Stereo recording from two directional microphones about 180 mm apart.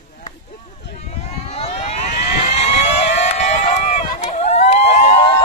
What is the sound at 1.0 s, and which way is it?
Vehicle, 35° left (ahead or behind).